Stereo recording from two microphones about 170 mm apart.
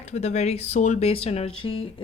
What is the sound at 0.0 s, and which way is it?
A woman's voice, 40° left (ahead or behind).